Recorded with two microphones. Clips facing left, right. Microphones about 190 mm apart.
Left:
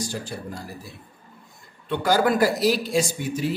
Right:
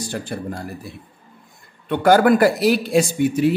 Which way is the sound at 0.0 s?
60° right (ahead or behind).